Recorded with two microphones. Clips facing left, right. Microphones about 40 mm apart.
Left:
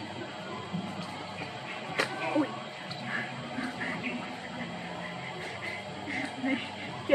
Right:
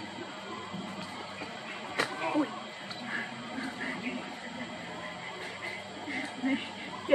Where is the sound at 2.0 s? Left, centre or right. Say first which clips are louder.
Left 1 dB; centre.